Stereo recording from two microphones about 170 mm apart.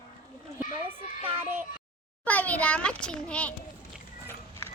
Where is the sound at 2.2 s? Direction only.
10° left (ahead or behind).